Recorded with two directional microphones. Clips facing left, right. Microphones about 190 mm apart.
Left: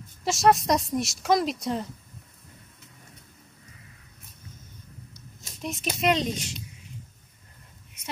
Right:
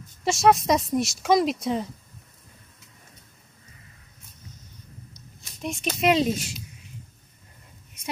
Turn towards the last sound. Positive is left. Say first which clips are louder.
# right 4 dB
turn(degrees=-5)  # may be behind; listen again after turning